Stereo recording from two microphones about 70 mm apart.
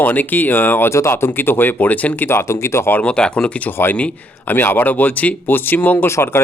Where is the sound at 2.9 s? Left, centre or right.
Centre; by 6.4 s left.